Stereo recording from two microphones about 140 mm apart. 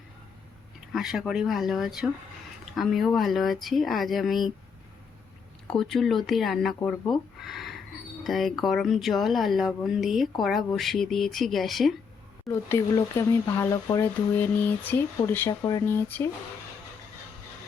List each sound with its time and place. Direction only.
0.9 s speech: 5° right (ahead or behind)
5.7 s speech: centre (ahead or behind)
7.1 s a sound: centre (ahead or behind)
8.2 s speech: centre (ahead or behind)
12.5 s speech: 20° left (ahead or behind)